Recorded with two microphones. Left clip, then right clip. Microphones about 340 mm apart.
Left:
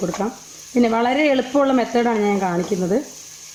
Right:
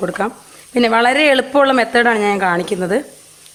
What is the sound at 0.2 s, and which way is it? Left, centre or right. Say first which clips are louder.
Speech: right 5 dB; right.